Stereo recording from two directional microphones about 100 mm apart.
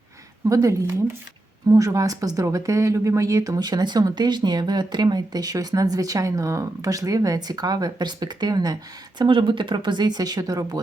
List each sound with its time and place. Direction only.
0.4 s speech: 35° right (ahead or behind)